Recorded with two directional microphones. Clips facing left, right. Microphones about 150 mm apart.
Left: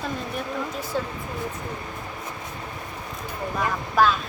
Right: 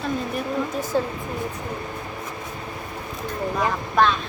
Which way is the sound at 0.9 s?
45° right (ahead or behind).